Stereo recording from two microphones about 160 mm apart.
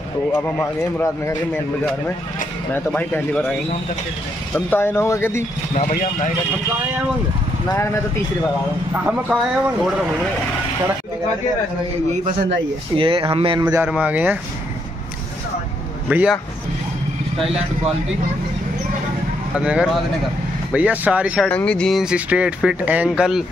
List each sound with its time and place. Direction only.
0.3 s speech: 10° left (ahead or behind)
2.7 s speech: 10° left (ahead or behind)
4.6 s speech: 10° left (ahead or behind)
5.8 s speech: 50° left (ahead or behind)
7.7 s speech: 15° left (ahead or behind)
8.9 s speech: 10° right (ahead or behind)
12.9 s speech: 35° right (ahead or behind)
13.6 s a man's voice: 20° right (ahead or behind)
13.8 s speech: 10° right (ahead or behind)
16.1 s speech: 10° right (ahead or behind)
19.5 s speech: 5° right (ahead or behind)
21.5 s speech: 5° left (ahead or behind)